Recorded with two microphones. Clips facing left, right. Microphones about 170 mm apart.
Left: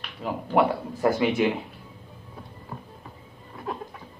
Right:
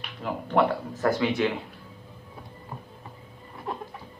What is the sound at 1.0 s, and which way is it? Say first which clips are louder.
Speech: left 2 dB; 20° left (ahead or behind).